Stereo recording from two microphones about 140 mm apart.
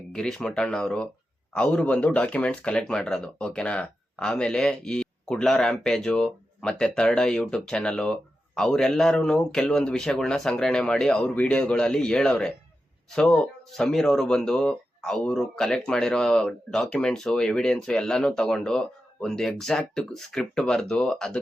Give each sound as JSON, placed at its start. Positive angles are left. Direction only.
{"t": 0.1, "sound": "speech", "side_deg": 5}